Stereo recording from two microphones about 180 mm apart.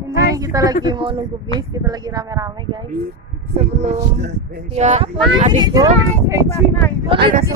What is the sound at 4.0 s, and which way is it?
Speech, 65° right (ahead or behind).